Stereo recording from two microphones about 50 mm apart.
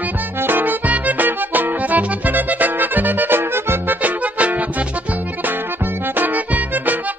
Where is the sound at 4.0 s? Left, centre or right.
Right.